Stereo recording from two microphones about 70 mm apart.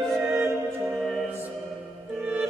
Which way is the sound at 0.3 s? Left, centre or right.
Right.